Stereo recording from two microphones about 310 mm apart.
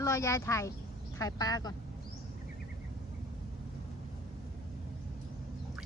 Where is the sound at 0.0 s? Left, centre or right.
Centre.